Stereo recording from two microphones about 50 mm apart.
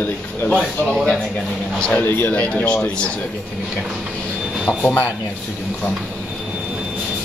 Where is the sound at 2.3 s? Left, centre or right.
Left.